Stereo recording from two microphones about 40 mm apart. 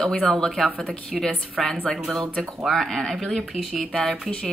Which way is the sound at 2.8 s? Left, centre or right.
Centre.